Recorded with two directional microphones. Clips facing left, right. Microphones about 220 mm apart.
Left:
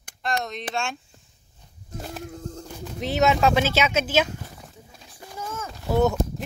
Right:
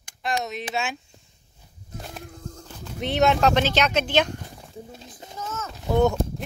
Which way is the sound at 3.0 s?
Centre (ahead or behind).